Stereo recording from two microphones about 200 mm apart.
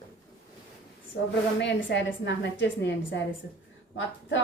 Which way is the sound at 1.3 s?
60° left (ahead or behind).